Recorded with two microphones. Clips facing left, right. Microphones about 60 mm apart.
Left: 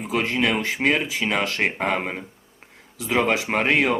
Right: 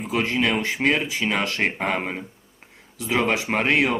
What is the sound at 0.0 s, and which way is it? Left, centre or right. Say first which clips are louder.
Speech: even; centre.